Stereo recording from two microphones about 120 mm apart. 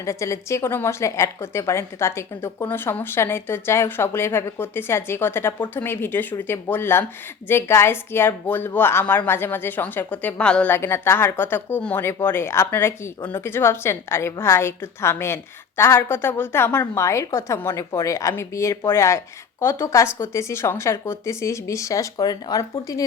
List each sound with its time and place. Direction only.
0.0 s a woman's voice: 25° left (ahead or behind)